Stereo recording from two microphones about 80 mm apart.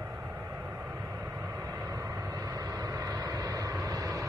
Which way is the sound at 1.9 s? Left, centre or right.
Right.